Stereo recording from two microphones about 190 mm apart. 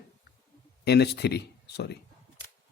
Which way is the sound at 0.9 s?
60° left (ahead or behind).